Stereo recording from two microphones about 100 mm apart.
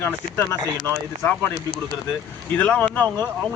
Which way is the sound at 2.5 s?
15° left (ahead or behind).